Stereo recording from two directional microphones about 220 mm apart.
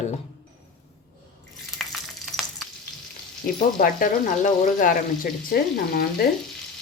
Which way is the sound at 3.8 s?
40° left (ahead or behind).